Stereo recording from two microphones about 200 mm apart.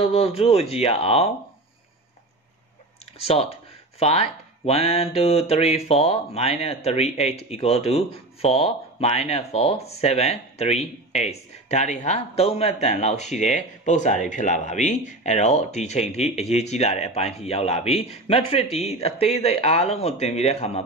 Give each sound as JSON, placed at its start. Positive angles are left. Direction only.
{"t": 0.1, "sound": "speech", "side_deg": 30}
{"t": 3.2, "sound": "speech", "side_deg": 30}